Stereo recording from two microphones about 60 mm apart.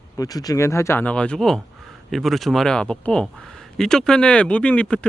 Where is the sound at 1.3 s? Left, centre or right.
Centre.